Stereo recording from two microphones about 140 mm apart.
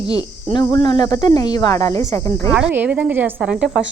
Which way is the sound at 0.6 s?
30° left (ahead or behind).